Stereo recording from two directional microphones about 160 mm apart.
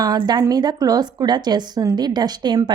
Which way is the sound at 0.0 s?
25° right (ahead or behind).